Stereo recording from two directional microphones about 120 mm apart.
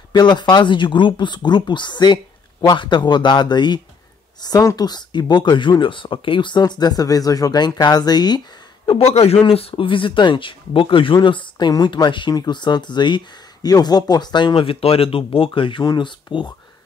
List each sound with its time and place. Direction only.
0.1 s speech: 35° left (ahead or behind)
8.8 s a man's voice: 55° left (ahead or behind); by 16.5 s 40° left (ahead or behind)